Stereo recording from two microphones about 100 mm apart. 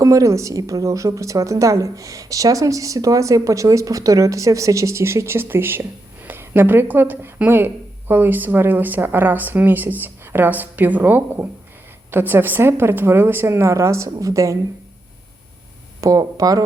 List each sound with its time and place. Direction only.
0.0 s speech: 30° right (ahead or behind)
16.0 s speech: 35° right (ahead or behind)